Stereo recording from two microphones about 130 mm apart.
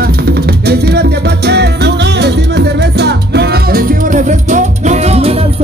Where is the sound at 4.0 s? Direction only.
85° right; by 5.4 s 50° right (ahead or behind).